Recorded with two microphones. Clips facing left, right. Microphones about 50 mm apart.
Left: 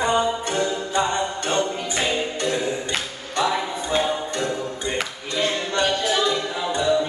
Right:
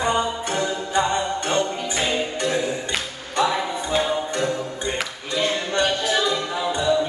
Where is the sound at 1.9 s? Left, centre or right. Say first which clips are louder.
Even; centre.